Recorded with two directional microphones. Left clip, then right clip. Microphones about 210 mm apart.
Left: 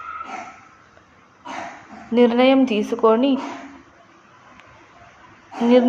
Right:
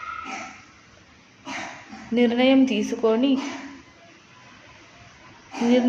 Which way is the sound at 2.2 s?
15° left (ahead or behind).